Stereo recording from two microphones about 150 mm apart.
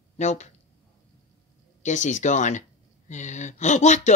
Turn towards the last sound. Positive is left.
turn(degrees=50)  # may be behind; listen again after turning